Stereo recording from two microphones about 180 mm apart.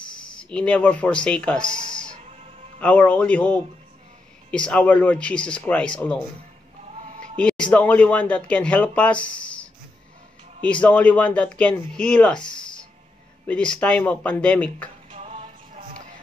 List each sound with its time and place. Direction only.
0.4 s speech: 5° left (ahead or behind)
7.3 s speech: 5° left (ahead or behind)
13.5 s speech: 5° left (ahead or behind)
15.0 s music: 40° right (ahead or behind)